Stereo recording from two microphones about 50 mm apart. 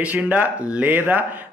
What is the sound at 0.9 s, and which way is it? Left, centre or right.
Speech, right.